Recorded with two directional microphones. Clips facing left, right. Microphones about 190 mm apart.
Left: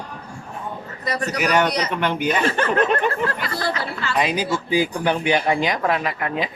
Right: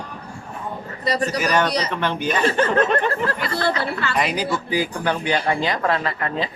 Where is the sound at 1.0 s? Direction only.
35° right (ahead or behind).